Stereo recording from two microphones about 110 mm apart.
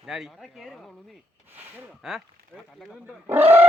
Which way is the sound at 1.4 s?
15° right (ahead or behind).